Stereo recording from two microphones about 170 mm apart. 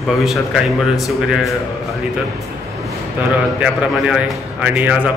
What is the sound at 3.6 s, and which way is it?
A man's voice, 5° right (ahead or behind).